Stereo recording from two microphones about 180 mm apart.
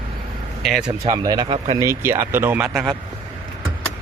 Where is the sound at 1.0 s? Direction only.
20° right (ahead or behind).